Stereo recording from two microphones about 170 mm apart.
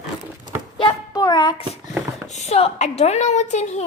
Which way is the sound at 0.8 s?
25° left (ahead or behind).